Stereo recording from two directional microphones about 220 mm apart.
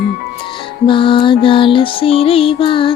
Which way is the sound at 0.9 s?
25° left (ahead or behind).